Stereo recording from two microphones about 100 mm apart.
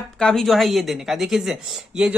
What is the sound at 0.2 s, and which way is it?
A woman's voice, 5° left (ahead or behind).